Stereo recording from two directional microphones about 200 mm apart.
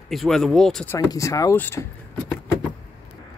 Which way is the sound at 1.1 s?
15° left (ahead or behind).